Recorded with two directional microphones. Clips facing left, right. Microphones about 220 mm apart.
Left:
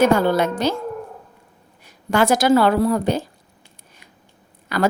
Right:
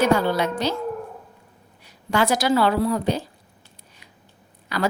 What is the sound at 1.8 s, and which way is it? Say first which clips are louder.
A woman's voice: left 4 dB; 50° left (ahead or behind).